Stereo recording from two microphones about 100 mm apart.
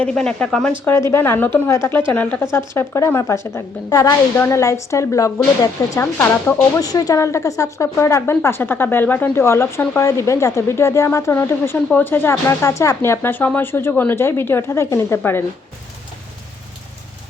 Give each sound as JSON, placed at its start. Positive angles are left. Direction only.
{"t": 0.0, "sound": "speech", "side_deg": 10}
{"t": 0.9, "sound": "speech", "side_deg": 25}
{"t": 6.6, "sound": "speech", "side_deg": 35}